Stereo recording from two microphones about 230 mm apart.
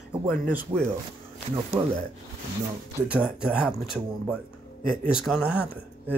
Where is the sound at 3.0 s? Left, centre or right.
Centre.